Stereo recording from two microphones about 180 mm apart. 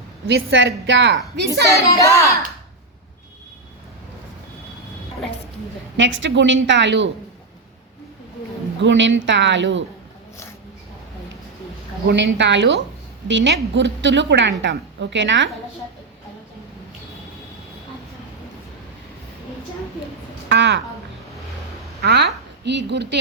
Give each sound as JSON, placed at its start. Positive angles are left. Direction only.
{"t": 0.3, "sound": "a woman's voice", "side_deg": -90}
{"t": 1.7, "sound": "child singing", "side_deg": 15}
{"t": 6.0, "sound": "a woman's voice", "side_deg": -90}
{"t": 8.8, "sound": "a woman's voice", "side_deg": -90}
{"t": 12.0, "sound": "a woman's voice", "side_deg": -80}
{"t": 13.2, "sound": "a woman's voice", "side_deg": -90}
{"t": 20.5, "sound": "a woman's voice", "side_deg": -85}
{"t": 22.0, "sound": "speech", "side_deg": -65}